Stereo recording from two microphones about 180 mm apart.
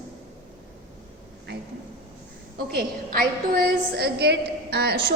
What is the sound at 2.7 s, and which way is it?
A woman's voice, 55° right (ahead or behind).